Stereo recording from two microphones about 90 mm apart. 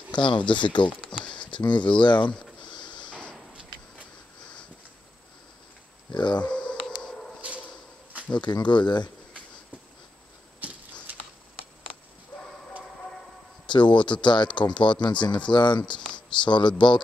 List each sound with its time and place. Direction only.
0.1 s speech: 60° left (ahead or behind)
2.7 s a sound: 60° left (ahead or behind)
6.1 s speech: 60° left (ahead or behind)
6.4 s a sound: 10° left (ahead or behind)
8.4 s speech: 55° left (ahead or behind)
10.6 s typewriter: 15° right (ahead or behind)
13.7 s speech: 60° left (ahead or behind)